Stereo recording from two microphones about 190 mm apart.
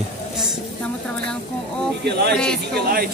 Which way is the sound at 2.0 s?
60° right (ahead or behind).